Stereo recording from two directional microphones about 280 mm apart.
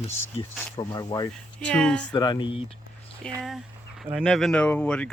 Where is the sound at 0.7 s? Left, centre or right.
Centre.